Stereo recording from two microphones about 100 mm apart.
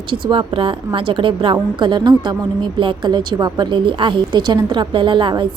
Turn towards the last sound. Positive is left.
turn(degrees=-55)  # may be behind; listen again after turning